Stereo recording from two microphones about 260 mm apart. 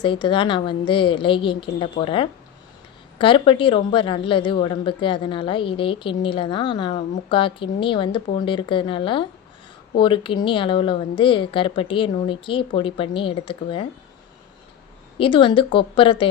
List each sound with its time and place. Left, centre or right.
0.0 s a woman's voice: centre
15.2 s a woman's voice: centre